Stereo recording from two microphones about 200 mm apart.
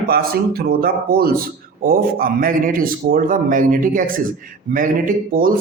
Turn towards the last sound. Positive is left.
turn(degrees=-45)  # may be behind; listen again after turning